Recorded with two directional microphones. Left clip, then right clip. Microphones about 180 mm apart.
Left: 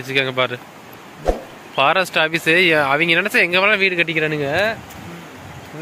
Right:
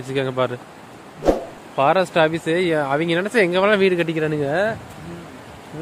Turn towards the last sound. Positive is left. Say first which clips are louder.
# left 2 dB
turn(degrees=-30)  # may be behind; listen again after turning